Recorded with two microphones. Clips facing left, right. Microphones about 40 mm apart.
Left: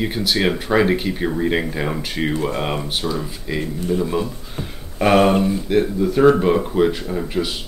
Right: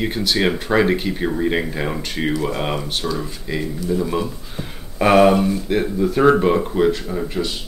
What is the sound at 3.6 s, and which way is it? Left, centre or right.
Speech, left.